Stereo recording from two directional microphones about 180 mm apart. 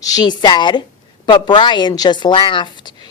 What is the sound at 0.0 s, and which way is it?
Speech, 20° left (ahead or behind).